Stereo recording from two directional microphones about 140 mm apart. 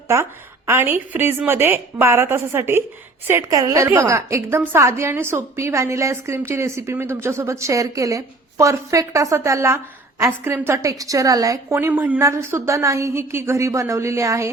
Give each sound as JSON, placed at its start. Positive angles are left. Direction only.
{"t": 0.1, "sound": "a woman's voice", "side_deg": -20}